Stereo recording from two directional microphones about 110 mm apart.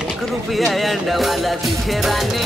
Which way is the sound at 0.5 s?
Centre (ahead or behind).